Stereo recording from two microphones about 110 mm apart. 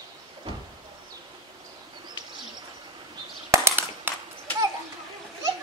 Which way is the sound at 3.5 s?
20° right (ahead or behind).